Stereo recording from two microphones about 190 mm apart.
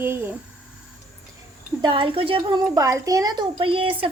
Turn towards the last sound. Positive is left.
turn(degrees=-30)  # may be behind; listen again after turning